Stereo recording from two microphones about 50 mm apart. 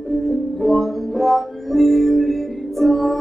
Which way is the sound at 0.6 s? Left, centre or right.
Centre.